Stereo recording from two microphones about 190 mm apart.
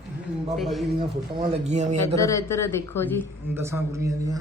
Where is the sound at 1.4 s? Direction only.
35° right (ahead or behind).